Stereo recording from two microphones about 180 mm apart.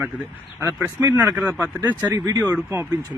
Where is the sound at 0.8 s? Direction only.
10° right (ahead or behind).